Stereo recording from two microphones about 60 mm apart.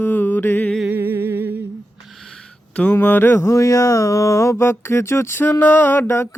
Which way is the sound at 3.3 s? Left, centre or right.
Left.